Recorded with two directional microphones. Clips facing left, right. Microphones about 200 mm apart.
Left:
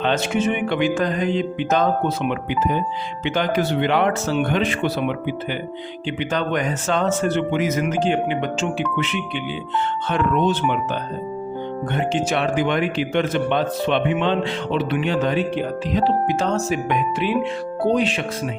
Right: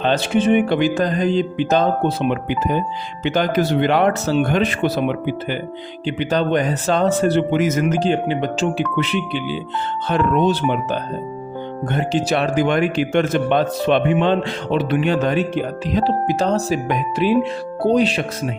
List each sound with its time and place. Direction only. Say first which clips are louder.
0.0 s speech: right 3 dB; 35° right (ahead or behind)
2.3 s speech: right 2 dB; 45° right (ahead or behind)
11.9 s speech: right 3 dB; 35° right (ahead or behind)